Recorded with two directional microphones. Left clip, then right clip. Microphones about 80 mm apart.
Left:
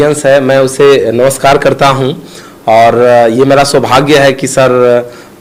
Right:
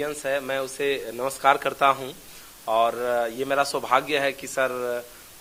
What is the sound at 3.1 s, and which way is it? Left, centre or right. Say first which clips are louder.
A man's voice: left 19 dB; right.